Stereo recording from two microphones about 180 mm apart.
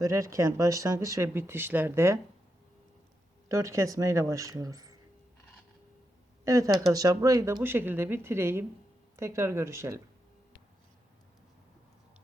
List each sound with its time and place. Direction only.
0.0 s speech: 15° right (ahead or behind)
3.5 s speech: 15° right (ahead or behind)
6.4 s speech: 15° right (ahead or behind)